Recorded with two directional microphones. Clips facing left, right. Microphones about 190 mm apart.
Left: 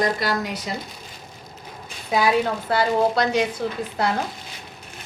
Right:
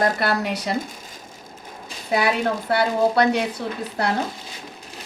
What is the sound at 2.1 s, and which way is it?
A woman's voice, 65° right (ahead or behind).